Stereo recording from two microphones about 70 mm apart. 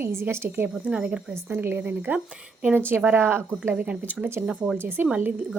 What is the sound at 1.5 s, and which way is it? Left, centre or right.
Speech, right.